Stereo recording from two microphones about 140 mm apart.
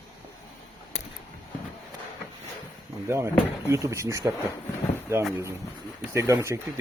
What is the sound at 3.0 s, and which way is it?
Speech, 20° right (ahead or behind).